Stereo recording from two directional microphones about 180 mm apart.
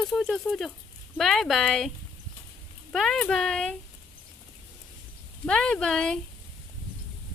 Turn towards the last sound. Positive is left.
turn(degrees=5)  # may be behind; listen again after turning